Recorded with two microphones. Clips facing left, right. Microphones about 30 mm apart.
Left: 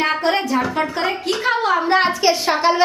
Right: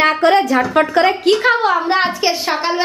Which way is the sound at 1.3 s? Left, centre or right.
Right.